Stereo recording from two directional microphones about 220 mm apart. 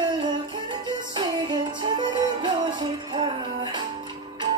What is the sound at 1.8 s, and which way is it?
Music, 20° right (ahead or behind).